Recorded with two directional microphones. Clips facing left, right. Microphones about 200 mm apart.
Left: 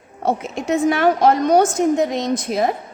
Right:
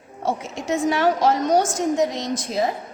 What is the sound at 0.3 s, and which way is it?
A woman's voice, 55° left (ahead or behind).